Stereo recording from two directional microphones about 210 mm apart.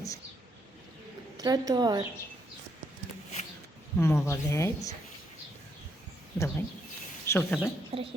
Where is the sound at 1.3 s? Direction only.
20° right (ahead or behind).